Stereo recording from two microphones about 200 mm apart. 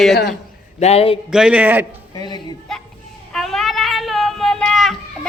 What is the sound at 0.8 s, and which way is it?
Speech, 30° left (ahead or behind).